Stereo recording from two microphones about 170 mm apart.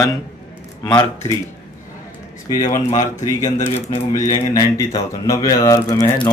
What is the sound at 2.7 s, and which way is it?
Speech, 50° left (ahead or behind).